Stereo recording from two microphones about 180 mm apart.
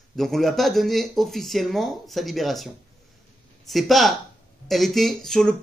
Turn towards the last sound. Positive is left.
turn(degrees=5)  # may be behind; listen again after turning